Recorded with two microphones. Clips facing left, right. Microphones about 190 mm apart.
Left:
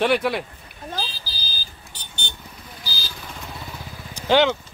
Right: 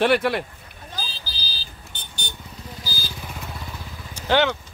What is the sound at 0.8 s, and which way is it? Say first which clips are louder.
Car alarm: left 5 dB; 50° left (ahead or behind).